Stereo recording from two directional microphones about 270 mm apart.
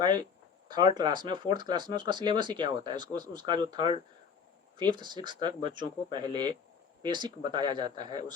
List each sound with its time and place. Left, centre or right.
0.7 s speech: centre